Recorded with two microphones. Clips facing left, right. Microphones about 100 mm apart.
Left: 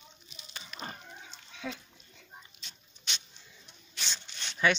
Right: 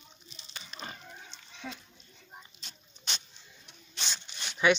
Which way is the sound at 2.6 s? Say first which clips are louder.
Right 3 dB; 40° right (ahead or behind).